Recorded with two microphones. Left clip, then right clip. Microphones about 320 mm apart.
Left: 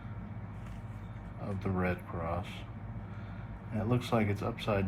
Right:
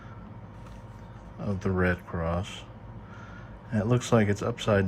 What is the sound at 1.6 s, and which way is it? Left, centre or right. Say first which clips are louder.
Speech: right 7 dB; right.